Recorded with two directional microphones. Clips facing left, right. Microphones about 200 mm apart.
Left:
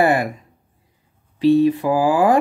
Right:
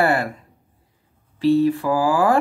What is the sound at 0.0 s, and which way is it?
Speech, 15° left (ahead or behind).